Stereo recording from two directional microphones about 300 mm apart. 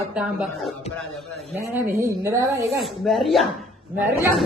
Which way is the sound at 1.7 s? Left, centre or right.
Centre.